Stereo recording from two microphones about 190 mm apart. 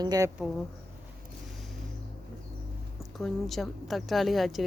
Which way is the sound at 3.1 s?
Centre (ahead or behind).